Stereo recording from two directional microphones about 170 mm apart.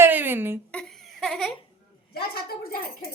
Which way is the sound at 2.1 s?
65° left (ahead or behind).